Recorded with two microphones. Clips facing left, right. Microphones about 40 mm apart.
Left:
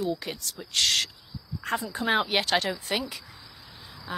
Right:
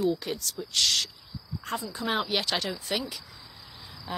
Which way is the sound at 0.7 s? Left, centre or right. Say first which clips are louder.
Left 2 dB; left.